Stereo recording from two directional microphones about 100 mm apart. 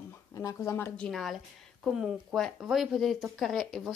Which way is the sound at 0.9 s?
10° left (ahead or behind).